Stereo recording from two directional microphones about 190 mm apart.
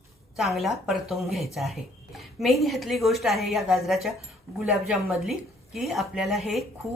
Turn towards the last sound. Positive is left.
turn(degrees=0)  # may be behind; listen again after turning